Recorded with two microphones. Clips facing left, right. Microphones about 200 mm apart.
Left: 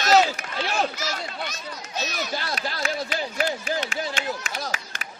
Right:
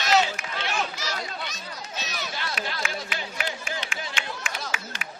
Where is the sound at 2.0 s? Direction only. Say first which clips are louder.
Left 6 dB; 45° left (ahead or behind).